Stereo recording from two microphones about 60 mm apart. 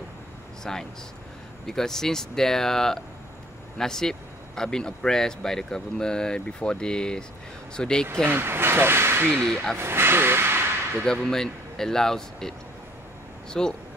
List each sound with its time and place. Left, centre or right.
0.7 s speech: centre
8.3 s speech: right
9.4 s speech: centre
9.8 s speech: right
11.1 s speech: centre